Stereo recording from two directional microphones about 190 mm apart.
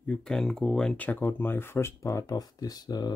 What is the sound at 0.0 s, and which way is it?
Speech, 5° left (ahead or behind).